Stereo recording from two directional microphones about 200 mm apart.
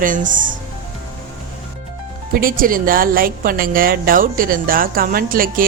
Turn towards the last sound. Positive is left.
turn(degrees=-45)  # may be behind; listen again after turning